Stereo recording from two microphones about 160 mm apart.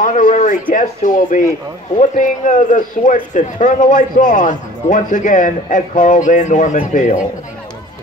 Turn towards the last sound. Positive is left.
turn(degrees=55)  # may be behind; listen again after turning